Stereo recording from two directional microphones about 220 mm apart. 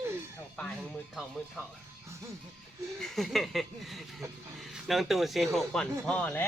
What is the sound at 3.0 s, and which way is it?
A man's voice, centre (ahead or behind).